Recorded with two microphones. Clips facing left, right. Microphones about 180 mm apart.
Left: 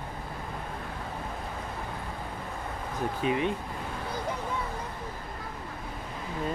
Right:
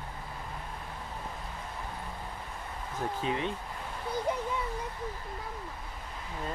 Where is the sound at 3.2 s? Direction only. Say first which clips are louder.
Left 6 dB; 15° left (ahead or behind).